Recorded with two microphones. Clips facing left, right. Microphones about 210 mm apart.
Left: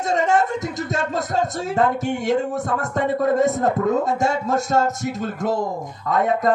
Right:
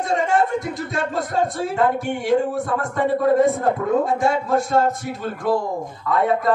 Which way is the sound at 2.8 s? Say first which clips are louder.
Right 1 dB; 45° left (ahead or behind).